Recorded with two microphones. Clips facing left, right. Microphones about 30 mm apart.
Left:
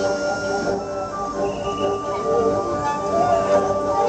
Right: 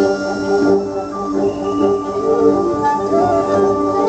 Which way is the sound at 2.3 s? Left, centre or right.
Right.